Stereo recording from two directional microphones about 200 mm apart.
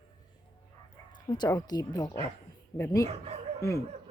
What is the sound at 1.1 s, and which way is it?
Speech, 20° left (ahead or behind).